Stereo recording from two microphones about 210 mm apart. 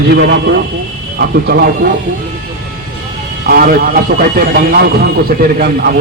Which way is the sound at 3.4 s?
45° right (ahead or behind).